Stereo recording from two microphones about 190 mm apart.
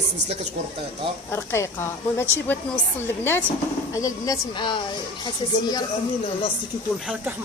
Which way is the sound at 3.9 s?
20° left (ahead or behind).